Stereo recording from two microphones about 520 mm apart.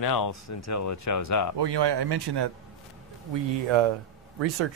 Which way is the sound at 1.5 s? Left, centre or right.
Right.